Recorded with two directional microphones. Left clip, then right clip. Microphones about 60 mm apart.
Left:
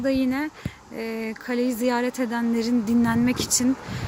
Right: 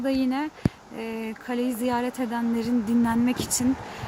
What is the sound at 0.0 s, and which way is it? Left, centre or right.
Speech, left.